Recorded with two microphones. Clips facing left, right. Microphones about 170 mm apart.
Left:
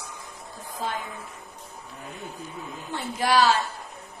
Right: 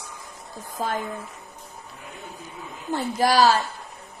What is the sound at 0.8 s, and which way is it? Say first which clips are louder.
Speech: right 4 dB; 45° right (ahead or behind).